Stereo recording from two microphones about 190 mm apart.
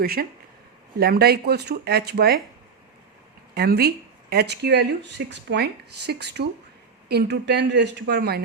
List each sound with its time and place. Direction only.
0.0 s speech: 55° right (ahead or behind)
3.5 s speech: 55° right (ahead or behind)